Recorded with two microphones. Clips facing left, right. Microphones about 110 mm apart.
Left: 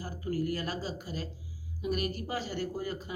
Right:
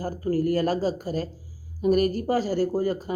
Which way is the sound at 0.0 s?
45° right (ahead or behind).